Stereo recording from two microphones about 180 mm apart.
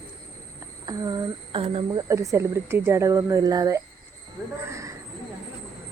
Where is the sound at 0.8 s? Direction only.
20° right (ahead or behind).